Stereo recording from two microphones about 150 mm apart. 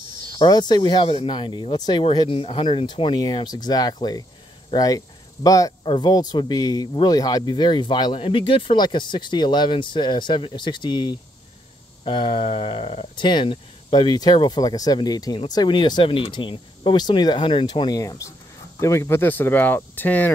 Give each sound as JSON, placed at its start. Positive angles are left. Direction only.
{"t": 0.4, "sound": "speech", "side_deg": 30}